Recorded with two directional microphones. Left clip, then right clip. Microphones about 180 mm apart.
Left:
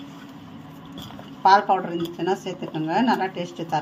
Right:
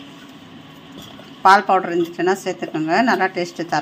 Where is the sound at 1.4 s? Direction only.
20° right (ahead or behind).